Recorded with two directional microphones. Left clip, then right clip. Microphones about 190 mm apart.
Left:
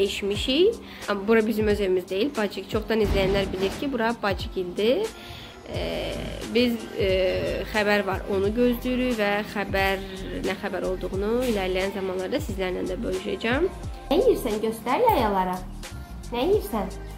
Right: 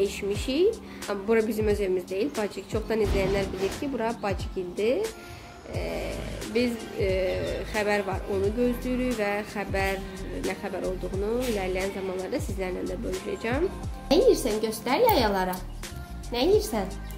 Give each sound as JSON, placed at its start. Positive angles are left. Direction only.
{"t": 0.0, "sound": "a woman's voice", "side_deg": 0}
{"t": 14.4, "sound": "a woman's voice", "side_deg": -40}